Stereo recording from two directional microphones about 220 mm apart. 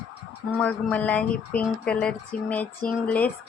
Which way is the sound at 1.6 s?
5° left (ahead or behind).